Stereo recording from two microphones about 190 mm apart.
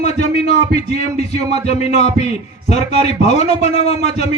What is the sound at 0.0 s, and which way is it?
A man's voice, 35° left (ahead or behind).